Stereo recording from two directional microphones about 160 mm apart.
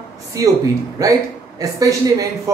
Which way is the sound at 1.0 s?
20° right (ahead or behind).